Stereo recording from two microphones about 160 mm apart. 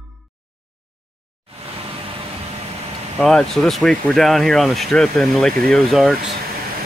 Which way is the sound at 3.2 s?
5° left (ahead or behind).